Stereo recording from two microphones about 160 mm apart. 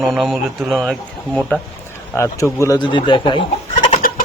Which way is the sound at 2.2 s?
20° left (ahead or behind).